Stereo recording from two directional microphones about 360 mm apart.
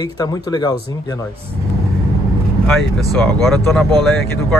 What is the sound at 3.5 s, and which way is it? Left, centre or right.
Speech, centre.